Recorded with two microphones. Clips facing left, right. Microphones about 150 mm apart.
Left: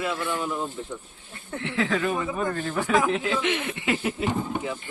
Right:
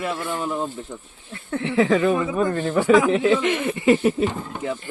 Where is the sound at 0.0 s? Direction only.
40° right (ahead or behind).